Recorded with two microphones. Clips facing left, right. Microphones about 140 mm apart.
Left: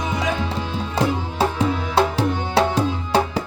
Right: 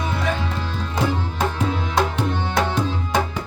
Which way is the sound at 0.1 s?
15° left (ahead or behind).